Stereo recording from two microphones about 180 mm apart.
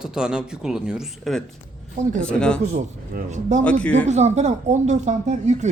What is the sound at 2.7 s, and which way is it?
Speech, 45° right (ahead or behind).